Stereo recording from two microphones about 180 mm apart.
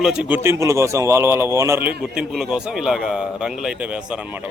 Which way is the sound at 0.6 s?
15° right (ahead or behind).